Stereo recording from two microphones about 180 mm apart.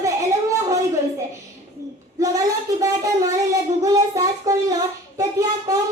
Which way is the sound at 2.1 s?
20° right (ahead or behind).